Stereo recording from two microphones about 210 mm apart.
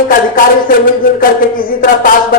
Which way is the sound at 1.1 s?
40° left (ahead or behind).